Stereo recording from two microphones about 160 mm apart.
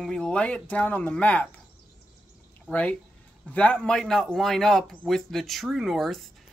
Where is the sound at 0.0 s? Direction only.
5° left (ahead or behind).